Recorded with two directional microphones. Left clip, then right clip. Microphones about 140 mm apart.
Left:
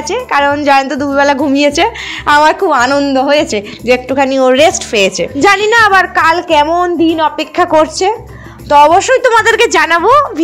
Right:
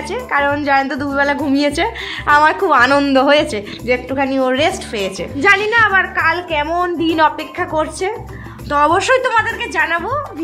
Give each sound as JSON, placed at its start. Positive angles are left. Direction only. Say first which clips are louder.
{"t": 0.1, "sound": "a woman's voice", "louder": "left 5 dB", "side_deg": 25}
{"t": 2.9, "sound": "a woman's voice", "louder": "left 2 dB", "side_deg": -5}
{"t": 3.5, "sound": "a woman's voice", "louder": "left 6 dB", "side_deg": 30}
{"t": 7.1, "sound": "a woman's voice", "louder": "left 2 dB", "side_deg": 5}
{"t": 7.5, "sound": "a woman's voice", "louder": "left 10 dB", "side_deg": 40}
{"t": 8.6, "sound": "a woman's voice", "louder": "left 7 dB", "side_deg": 25}
{"t": 9.4, "sound": "a woman's voice", "louder": "left 9 dB", "side_deg": 60}